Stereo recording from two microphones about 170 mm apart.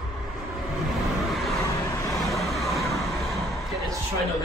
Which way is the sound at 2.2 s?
Centre (ahead or behind).